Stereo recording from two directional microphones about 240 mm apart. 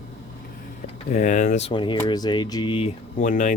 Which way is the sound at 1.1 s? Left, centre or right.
Left.